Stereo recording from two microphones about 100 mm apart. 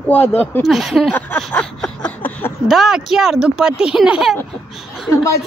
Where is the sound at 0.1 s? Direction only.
20° left (ahead or behind).